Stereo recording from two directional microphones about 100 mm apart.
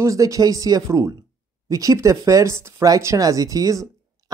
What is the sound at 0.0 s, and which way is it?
Speech, 35° right (ahead or behind).